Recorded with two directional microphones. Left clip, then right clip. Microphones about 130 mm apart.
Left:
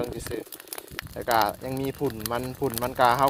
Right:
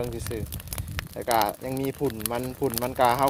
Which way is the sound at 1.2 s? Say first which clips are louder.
Left 1 dB; 30° right (ahead or behind).